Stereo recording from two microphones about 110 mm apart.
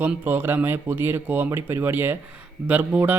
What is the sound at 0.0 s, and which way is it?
Speech, 15° right (ahead or behind).